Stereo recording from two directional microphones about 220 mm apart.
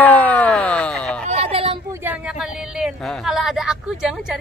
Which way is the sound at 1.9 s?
10° right (ahead or behind).